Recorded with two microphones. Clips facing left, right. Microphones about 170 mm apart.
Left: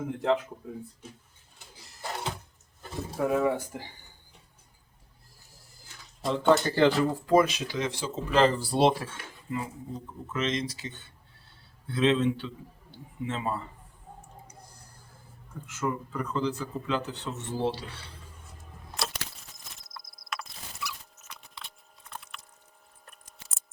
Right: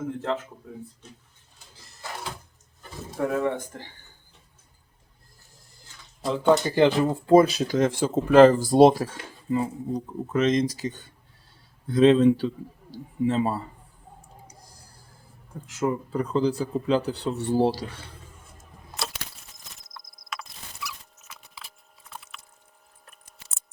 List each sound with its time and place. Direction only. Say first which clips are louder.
3.2 s speech: even; 5° left (ahead or behind)
6.2 s speech: right 2 dB; centre (ahead or behind)
6.7 s speech: right 3 dB; 20° right (ahead or behind); by 13.7 s 35° right (ahead or behind)
14.4 s a sound: right 1 dB; 35° right (ahead or behind)
15.6 s speech: right 5 dB; 35° right (ahead or behind)
19.0 s a sound: even; centre (ahead or behind)
23.0 s scissors: even; centre (ahead or behind)